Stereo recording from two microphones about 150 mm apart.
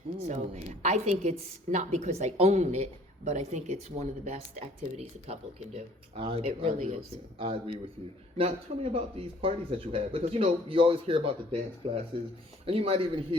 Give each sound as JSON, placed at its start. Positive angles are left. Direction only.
{"t": 0.2, "sound": "a woman's voice", "side_deg": -50}